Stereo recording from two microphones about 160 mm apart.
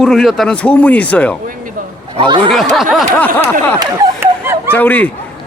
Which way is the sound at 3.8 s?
20° right (ahead or behind).